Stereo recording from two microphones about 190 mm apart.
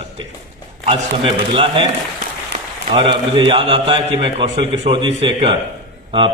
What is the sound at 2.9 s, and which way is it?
A man's voice, 25° right (ahead or behind).